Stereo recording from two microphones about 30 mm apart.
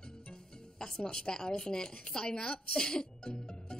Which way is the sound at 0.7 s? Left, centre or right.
Left.